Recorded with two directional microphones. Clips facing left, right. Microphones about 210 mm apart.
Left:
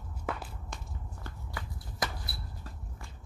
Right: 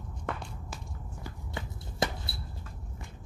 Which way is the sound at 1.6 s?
25° right (ahead or behind).